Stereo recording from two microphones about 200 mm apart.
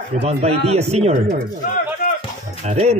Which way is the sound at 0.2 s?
30° right (ahead or behind).